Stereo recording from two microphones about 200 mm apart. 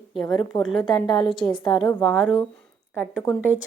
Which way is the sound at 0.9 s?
20° left (ahead or behind).